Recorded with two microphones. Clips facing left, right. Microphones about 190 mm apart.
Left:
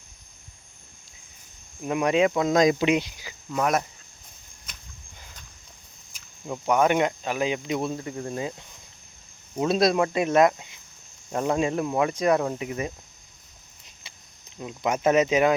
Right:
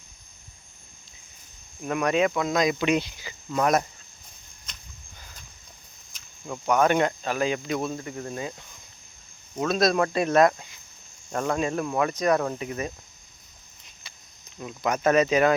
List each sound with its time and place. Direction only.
1.8 s speech: 20° left (ahead or behind)
2.6 s speech: 40° left (ahead or behind)
2.8 s speech: 15° left (ahead or behind)
6.4 s speech: 20° left (ahead or behind)
9.6 s speech: 30° left (ahead or behind)
9.9 s speech: 15° left (ahead or behind)
14.6 s speech: 20° left (ahead or behind)